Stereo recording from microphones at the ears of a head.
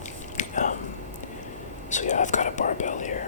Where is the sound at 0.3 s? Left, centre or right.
Left.